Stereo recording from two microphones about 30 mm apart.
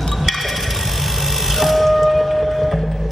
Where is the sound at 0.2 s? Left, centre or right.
Centre.